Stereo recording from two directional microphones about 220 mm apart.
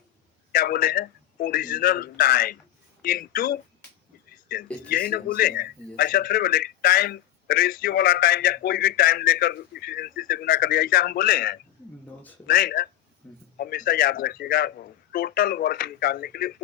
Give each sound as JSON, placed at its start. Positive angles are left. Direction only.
{"t": 0.5, "sound": "a man's voice", "side_deg": 45}
{"t": 4.3, "sound": "a sound", "side_deg": 45}
{"t": 4.9, "sound": "a man's voice", "side_deg": 45}
{"t": 13.2, "sound": "a man's voice", "side_deg": 5}
{"t": 13.6, "sound": "a man's voice", "side_deg": 45}